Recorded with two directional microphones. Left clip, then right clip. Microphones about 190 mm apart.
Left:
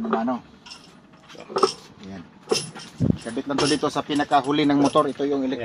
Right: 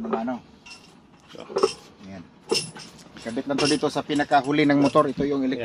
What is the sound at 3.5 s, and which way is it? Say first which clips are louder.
Speech: left 1 dB; 15° right (ahead or behind).